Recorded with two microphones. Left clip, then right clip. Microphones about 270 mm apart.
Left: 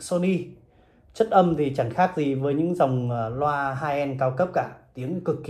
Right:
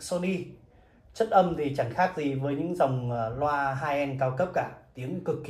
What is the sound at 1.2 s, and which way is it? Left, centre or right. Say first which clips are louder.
Mantra: left 4 dB; centre.